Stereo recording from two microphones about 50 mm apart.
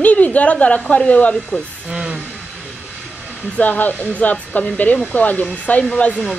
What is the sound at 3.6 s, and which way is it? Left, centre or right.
A woman's voice, left.